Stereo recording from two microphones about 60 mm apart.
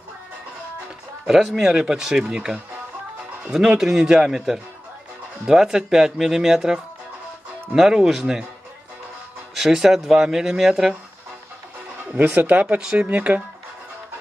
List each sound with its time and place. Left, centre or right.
1.2 s speech: centre
9.6 s speech: centre
12.1 s speech: right
12.6 s speech: centre